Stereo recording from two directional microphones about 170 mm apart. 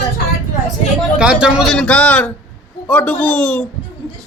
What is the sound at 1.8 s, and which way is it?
Speech, 5° left (ahead or behind).